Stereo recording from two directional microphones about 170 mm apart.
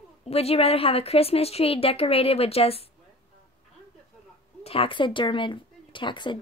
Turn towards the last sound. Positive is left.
turn(degrees=30)  # may be behind; listen again after turning